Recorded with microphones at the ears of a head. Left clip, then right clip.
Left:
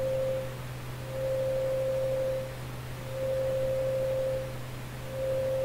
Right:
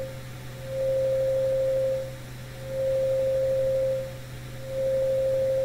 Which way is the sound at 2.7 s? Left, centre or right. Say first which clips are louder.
Right 16 dB; right.